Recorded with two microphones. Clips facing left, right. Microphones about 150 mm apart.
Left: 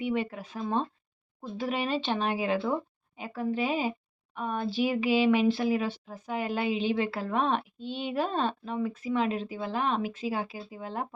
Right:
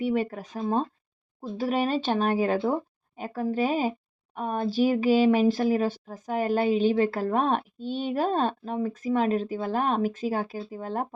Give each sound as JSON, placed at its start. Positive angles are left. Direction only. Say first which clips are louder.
{"t": 0.0, "sound": "speech", "louder": "right 4 dB", "side_deg": -40}